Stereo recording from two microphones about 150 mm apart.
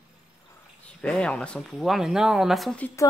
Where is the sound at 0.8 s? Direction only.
5° left (ahead or behind).